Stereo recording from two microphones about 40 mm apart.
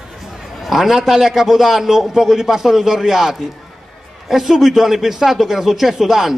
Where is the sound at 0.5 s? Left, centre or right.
Centre.